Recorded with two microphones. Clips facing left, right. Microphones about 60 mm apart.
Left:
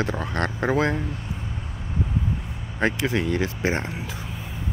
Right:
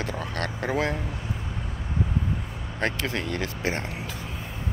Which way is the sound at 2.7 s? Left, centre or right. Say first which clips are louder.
Left 5 dB; centre.